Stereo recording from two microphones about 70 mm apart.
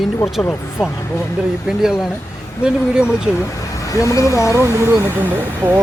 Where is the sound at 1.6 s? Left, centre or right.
Centre.